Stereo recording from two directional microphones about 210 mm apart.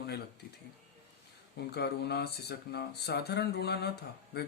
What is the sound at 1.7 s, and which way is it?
A man's voice, 50° left (ahead or behind).